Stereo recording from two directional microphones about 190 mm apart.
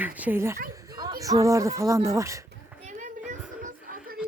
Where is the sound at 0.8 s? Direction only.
20° right (ahead or behind).